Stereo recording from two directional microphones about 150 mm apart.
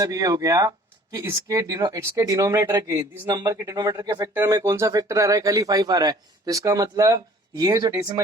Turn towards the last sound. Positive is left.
turn(degrees=-25)  # may be behind; listen again after turning